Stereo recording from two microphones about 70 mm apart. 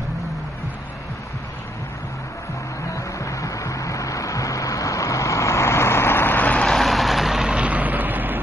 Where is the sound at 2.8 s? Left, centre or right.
Left.